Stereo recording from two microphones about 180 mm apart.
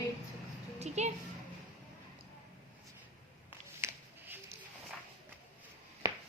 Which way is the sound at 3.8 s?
10° right (ahead or behind).